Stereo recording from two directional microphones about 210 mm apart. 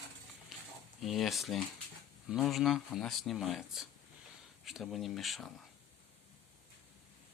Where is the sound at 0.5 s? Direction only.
Centre (ahead or behind).